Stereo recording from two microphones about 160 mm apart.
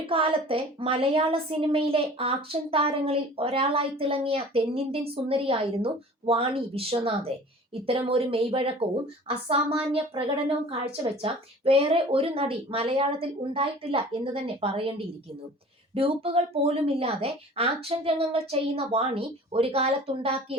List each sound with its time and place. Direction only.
0.1 s speech: 35° right (ahead or behind)